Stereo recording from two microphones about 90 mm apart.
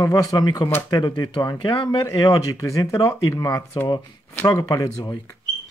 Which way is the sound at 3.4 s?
50° left (ahead or behind).